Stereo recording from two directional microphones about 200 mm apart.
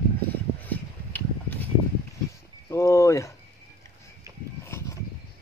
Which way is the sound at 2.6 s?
15° left (ahead or behind).